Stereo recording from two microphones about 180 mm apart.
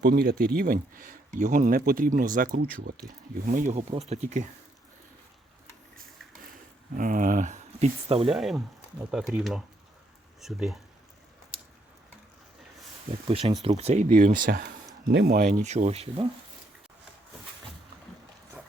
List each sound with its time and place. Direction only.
0.0 s speech: 55° right (ahead or behind); by 4.4 s 40° right (ahead or behind)
6.9 s speech: 50° right (ahead or behind); by 8.3 s 35° right (ahead or behind)
8.3 s speech: centre (ahead or behind)
13.1 s speech: 30° right (ahead or behind)
13.7 s speech: 35° right (ahead or behind)